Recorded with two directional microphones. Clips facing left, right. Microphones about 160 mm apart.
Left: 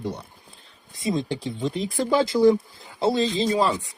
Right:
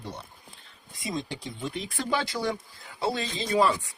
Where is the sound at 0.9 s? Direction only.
25° left (ahead or behind).